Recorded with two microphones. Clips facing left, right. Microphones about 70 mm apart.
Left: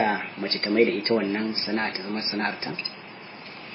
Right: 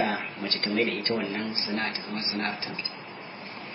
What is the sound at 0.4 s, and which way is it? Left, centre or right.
Speech, left.